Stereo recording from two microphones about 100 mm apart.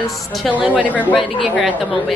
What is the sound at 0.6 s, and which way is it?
Speech, 15° right (ahead or behind).